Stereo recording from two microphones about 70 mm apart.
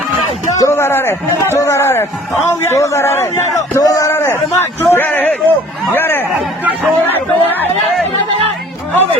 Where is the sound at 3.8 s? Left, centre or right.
Left.